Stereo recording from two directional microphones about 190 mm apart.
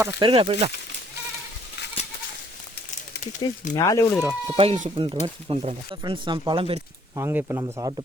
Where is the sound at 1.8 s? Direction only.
60° left (ahead or behind).